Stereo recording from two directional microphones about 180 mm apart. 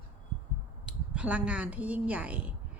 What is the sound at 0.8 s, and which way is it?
Speech, 5° right (ahead or behind).